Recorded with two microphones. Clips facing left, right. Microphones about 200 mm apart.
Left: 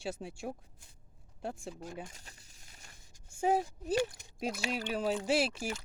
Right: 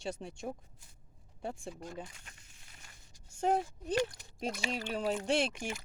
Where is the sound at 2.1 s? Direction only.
35° left (ahead or behind).